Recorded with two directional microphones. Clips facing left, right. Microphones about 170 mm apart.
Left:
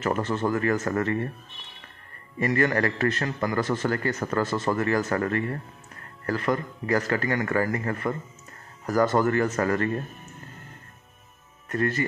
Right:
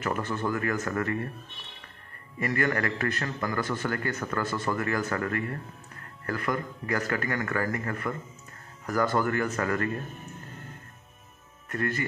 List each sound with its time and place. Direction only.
0.0 s a man's voice: 25° left (ahead or behind)
2.4 s a man's voice: 30° left (ahead or behind)
11.7 s a man's voice: 25° left (ahead or behind)